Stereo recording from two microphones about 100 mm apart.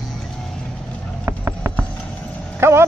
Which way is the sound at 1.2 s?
25° right (ahead or behind).